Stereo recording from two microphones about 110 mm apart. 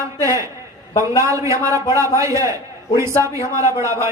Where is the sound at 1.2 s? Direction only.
30° right (ahead or behind).